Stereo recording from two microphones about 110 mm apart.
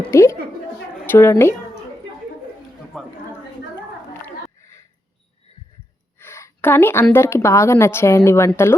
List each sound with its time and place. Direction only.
0.1 s speech: 25° left (ahead or behind)
2.9 s a sound: 5° left (ahead or behind)
6.1 s a woman's voice: 20° left (ahead or behind)